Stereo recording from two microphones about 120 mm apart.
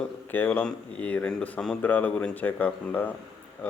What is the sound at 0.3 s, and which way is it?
Speech, 15° left (ahead or behind).